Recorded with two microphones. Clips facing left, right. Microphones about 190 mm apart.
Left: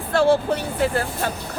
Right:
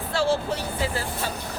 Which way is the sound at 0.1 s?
55° left (ahead or behind).